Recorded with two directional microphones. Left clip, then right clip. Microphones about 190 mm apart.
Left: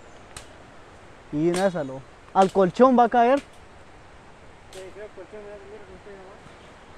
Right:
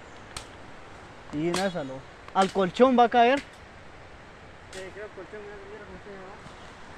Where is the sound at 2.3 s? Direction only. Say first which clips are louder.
Left 5 dB; 70° left (ahead or behind).